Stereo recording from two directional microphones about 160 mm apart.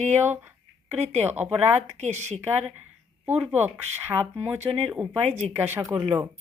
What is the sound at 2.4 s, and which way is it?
Speech, 10° right (ahead or behind).